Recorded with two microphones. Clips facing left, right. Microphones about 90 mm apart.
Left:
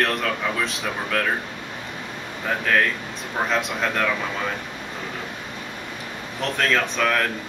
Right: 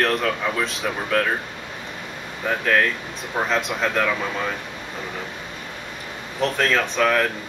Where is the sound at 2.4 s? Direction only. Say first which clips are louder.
Right 1 dB; centre (ahead or behind).